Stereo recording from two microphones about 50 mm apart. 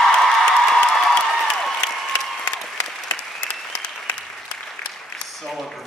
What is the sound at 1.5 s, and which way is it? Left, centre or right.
Applause, centre.